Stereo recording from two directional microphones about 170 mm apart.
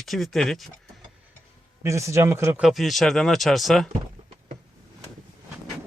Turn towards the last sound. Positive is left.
turn(degrees=0)  # may be behind; listen again after turning